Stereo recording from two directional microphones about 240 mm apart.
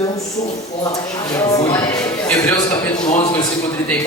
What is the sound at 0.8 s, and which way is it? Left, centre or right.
Speech, centre.